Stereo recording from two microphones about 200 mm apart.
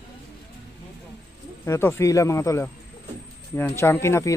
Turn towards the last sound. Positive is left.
turn(degrees=15)  # may be behind; listen again after turning